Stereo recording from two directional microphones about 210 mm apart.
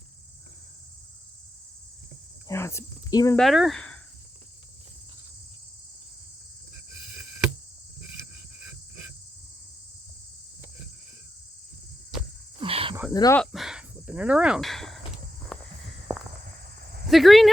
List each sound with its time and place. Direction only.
2.5 s speech: 10° left (ahead or behind)
3.3 s speech: centre (ahead or behind)
12.5 s cricket: 25° right (ahead or behind)
13.1 s speech: 15° left (ahead or behind)
13.4 s speech: centre (ahead or behind)
15.5 s walk: 5° left (ahead or behind)
17.1 s speech: centre (ahead or behind)